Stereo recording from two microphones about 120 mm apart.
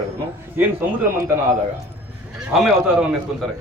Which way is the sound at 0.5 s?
15° right (ahead or behind).